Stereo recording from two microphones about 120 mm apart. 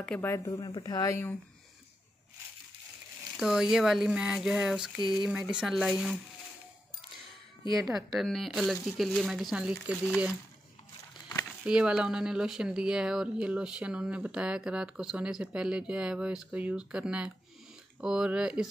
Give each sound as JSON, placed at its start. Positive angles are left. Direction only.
{"t": 0.0, "sound": "speech", "side_deg": 10}
{"t": 0.5, "sound": "speech", "side_deg": 40}
{"t": 3.3, "sound": "speech", "side_deg": -5}
{"t": 7.8, "sound": "speech", "side_deg": 0}
{"t": 11.6, "sound": "speech", "side_deg": -5}